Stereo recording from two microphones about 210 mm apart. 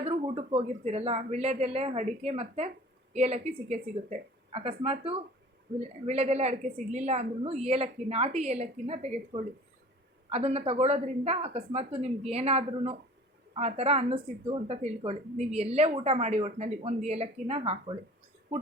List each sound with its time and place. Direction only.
0.0 s a woman's voice: 25° right (ahead or behind)